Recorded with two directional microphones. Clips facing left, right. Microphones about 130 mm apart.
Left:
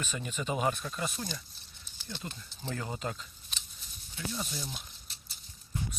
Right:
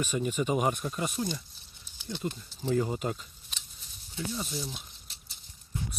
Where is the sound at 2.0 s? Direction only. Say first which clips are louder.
Right 5 dB; 15° right (ahead or behind).